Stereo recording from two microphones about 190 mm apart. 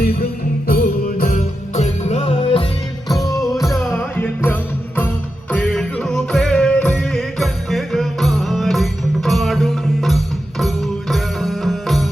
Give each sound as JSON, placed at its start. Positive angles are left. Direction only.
{"t": 0.7, "sound": "music", "side_deg": 50}
{"t": 3.1, "sound": "music", "side_deg": 0}
{"t": 3.9, "sound": "music", "side_deg": 10}